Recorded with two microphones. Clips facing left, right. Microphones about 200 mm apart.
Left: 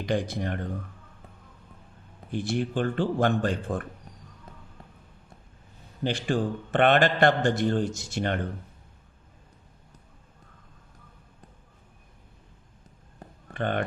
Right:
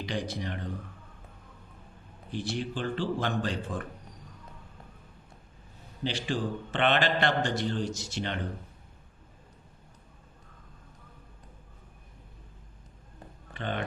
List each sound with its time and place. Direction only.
0.0 s a man's voice: 50° left (ahead or behind)
2.3 s a man's voice: 55° left (ahead or behind)
6.0 s a man's voice: 50° left (ahead or behind)
13.5 s speech: 55° left (ahead or behind)